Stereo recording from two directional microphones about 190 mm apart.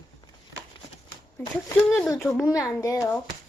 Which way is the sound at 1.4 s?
10° left (ahead or behind).